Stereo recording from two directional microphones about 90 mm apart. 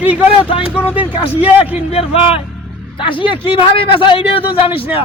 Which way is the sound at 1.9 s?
90° left.